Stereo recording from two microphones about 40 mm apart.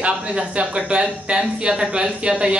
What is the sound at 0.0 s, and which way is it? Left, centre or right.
Speech, right.